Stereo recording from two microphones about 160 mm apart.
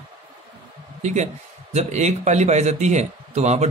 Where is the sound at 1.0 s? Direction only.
45° right (ahead or behind).